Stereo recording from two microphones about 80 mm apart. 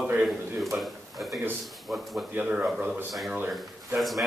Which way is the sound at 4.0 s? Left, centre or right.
Centre.